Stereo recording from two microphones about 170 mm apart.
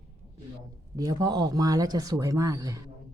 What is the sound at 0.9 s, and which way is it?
Speech, 20° right (ahead or behind).